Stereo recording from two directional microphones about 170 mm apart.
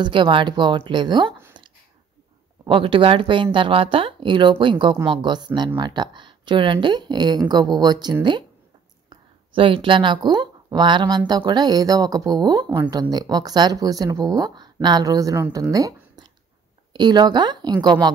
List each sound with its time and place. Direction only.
0.0 s speech: 30° right (ahead or behind)
2.6 s speech: 30° right (ahead or behind)